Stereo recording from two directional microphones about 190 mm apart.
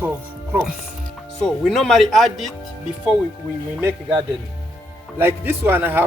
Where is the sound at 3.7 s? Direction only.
10° right (ahead or behind).